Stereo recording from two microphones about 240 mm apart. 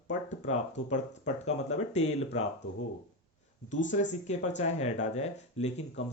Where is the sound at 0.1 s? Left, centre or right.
Left.